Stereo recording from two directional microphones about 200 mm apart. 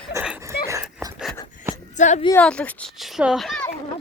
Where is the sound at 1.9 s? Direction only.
35° left (ahead or behind).